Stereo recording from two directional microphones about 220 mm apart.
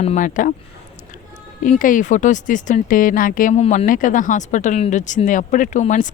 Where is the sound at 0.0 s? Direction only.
30° left (ahead or behind).